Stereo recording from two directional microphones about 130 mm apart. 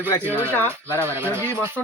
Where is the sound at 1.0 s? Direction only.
20° right (ahead or behind).